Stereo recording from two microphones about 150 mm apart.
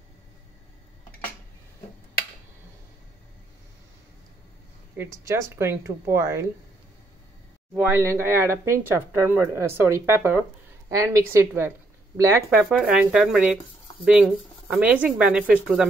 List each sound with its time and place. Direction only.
4.9 s speech: 15° right (ahead or behind)
7.7 s a woman's voice: 15° right (ahead or behind)